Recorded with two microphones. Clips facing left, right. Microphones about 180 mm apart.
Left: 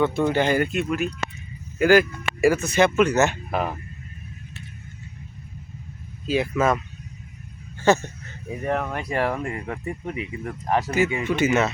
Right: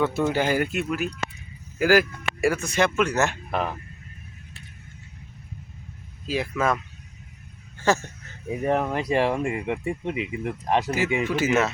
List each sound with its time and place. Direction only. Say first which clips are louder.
0.0 s speech: left 2 dB; 5° right (ahead or behind)
6.2 s speech: left 3 dB; centre (ahead or behind)
7.9 s speech: left 4 dB; centre (ahead or behind)
8.5 s speech: right 2 dB; 20° right (ahead or behind)
10.9 s speech: left 2 dB; 5° right (ahead or behind)